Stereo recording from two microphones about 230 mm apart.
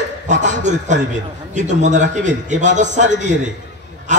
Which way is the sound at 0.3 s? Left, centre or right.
Right.